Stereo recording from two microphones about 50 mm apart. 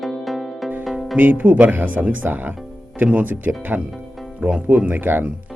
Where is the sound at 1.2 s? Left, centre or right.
Right.